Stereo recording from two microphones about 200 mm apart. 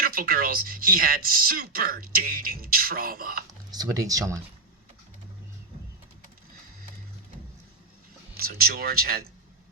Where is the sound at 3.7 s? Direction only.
20° right (ahead or behind).